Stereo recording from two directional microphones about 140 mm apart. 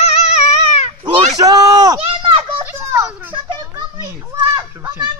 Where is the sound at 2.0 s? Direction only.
40° right (ahead or behind).